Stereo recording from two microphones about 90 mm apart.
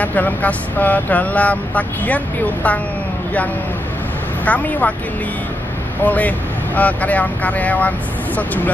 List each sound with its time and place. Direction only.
0.0 s speech: 20° left (ahead or behind)
4.5 s speech: 15° left (ahead or behind)
6.0 s speech: 15° left (ahead or behind)